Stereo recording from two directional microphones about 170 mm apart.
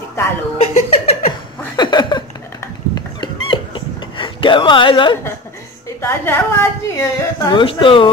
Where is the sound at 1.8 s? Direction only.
25° left (ahead or behind).